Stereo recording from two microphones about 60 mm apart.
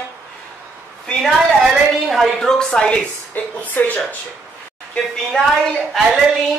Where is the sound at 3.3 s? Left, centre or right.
Left.